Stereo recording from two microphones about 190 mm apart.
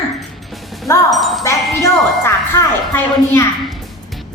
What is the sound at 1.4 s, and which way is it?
A woman's voice, 15° left (ahead or behind).